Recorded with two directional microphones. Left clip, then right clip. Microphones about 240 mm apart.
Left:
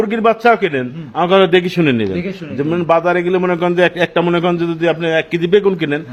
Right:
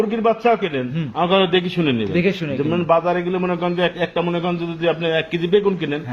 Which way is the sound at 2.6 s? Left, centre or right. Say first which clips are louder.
Left 4 dB; left.